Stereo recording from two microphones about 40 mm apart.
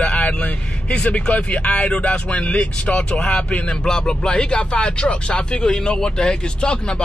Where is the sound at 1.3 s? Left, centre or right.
Left.